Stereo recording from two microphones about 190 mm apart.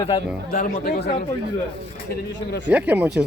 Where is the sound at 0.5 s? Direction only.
50° left (ahead or behind).